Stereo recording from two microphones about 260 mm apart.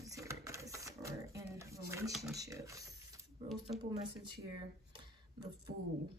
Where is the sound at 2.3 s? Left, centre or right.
Centre.